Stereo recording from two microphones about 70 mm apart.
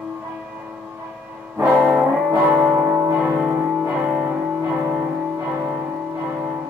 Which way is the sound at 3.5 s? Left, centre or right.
Right.